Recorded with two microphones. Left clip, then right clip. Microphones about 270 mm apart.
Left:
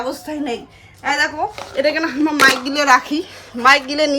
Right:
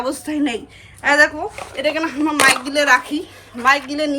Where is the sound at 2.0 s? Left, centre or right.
Centre.